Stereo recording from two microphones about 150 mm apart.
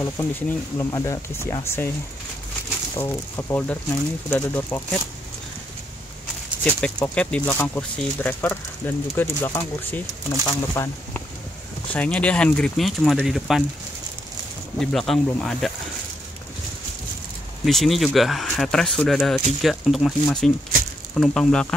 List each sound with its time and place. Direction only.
0.0 s speech: 15° left (ahead or behind)
3.0 s speech: 15° left (ahead or behind)
6.6 s speech: 5° left (ahead or behind)
14.8 s speech: centre (ahead or behind)
17.6 s speech: centre (ahead or behind)